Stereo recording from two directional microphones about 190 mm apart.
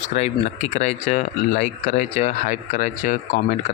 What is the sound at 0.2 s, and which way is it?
Speech, 40° left (ahead or behind).